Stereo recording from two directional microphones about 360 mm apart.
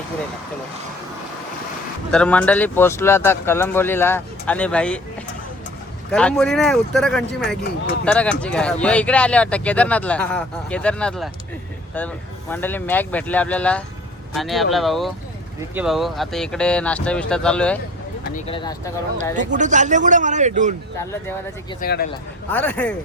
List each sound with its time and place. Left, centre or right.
2.1 s speech: centre
6.1 s speech: centre
18.3 s speech: centre
19.4 s speech: right
21.0 s speech: centre
21.8 s speech: left
22.5 s speech: centre